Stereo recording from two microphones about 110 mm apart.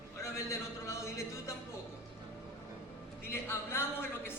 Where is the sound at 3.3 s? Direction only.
20° left (ahead or behind).